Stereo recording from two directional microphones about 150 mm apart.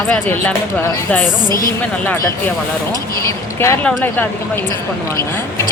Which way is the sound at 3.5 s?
15° left (ahead or behind).